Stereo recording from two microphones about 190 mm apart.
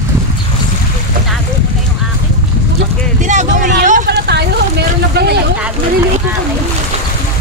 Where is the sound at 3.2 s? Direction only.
40° right (ahead or behind); by 4.4 s 60° right (ahead or behind).